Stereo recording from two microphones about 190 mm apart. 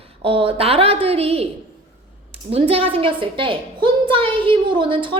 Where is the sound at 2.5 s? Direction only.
30° right (ahead or behind).